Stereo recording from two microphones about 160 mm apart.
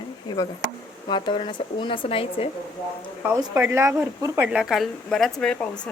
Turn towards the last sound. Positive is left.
turn(degrees=5)  # may be behind; listen again after turning